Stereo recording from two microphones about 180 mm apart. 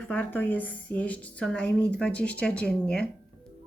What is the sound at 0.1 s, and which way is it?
A woman's voice, 10° left (ahead or behind).